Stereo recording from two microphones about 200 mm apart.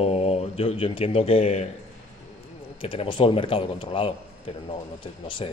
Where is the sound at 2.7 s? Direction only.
25° left (ahead or behind).